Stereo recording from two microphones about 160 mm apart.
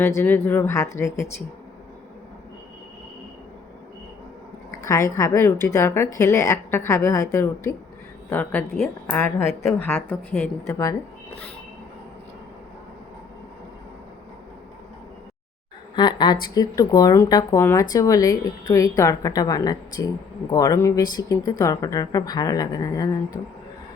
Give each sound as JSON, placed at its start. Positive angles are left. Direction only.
{"t": 0.0, "sound": "speech", "side_deg": 15}
{"t": 4.7, "sound": "a woman's voice", "side_deg": 20}
{"t": 9.8, "sound": "a woman's voice", "side_deg": 15}
{"t": 16.0, "sound": "a woman's voice", "side_deg": 25}